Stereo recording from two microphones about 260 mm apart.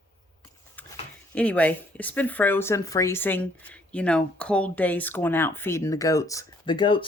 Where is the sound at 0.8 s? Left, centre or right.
Centre.